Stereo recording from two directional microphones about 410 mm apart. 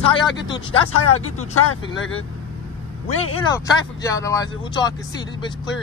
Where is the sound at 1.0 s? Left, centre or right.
Left.